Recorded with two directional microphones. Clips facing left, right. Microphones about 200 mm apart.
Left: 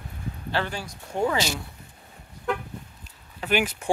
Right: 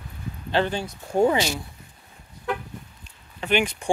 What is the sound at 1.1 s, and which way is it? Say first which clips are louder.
Speech: right 6 dB; 40° right (ahead or behind).